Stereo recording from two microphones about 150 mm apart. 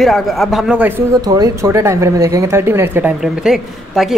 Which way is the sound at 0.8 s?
15° right (ahead or behind).